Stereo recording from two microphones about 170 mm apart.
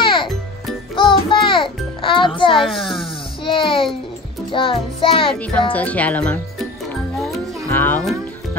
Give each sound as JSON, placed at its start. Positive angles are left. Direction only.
{"t": 0.0, "sound": "music", "side_deg": 30}
{"t": 2.6, "sound": "a child's voice", "side_deg": 0}
{"t": 3.4, "sound": "a child's voice", "side_deg": 30}
{"t": 4.5, "sound": "music", "side_deg": 30}
{"t": 5.4, "sound": "speech", "side_deg": 10}
{"t": 7.2, "sound": "music", "side_deg": 0}
{"t": 7.7, "sound": "speech", "side_deg": 10}